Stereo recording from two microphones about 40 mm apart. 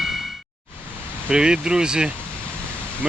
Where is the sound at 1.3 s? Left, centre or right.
Centre.